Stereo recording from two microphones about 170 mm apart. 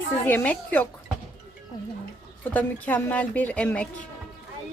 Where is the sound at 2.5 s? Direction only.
10° left (ahead or behind).